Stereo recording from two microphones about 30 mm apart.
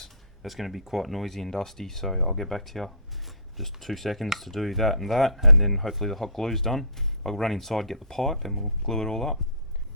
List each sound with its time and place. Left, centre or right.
0.4 s speech: centre
8.9 s speech: centre